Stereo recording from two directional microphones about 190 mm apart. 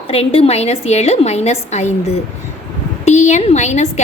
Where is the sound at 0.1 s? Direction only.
30° left (ahead or behind).